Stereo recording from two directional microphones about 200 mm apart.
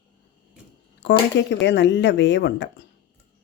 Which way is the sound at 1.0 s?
65° left (ahead or behind).